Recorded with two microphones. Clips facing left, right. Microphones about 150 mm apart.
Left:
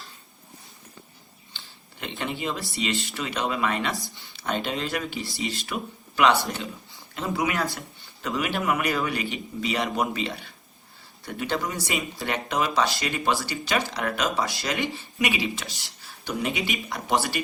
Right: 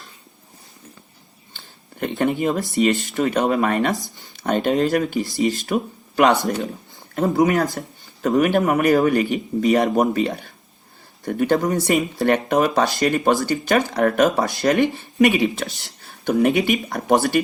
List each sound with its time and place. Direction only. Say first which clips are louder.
1.5 s speech: right 12 dB; 50° right (ahead or behind)